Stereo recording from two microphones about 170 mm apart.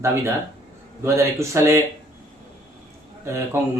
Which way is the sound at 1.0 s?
15° right (ahead or behind).